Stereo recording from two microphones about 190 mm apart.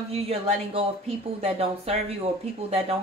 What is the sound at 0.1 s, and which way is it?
Speech, 35° right (ahead or behind).